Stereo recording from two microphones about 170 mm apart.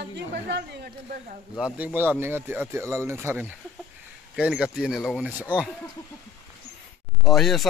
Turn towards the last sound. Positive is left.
turn(degrees=0)  # may be behind; listen again after turning